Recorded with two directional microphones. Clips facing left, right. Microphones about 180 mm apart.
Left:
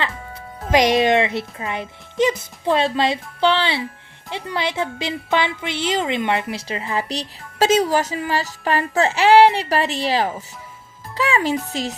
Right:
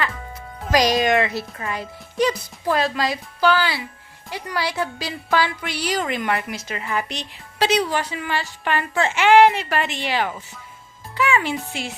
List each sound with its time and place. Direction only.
0.7 s a woman's voice: 25° left (ahead or behind)
11.1 s music: 35° left (ahead or behind)
11.7 s a woman's voice: 35° left (ahead or behind)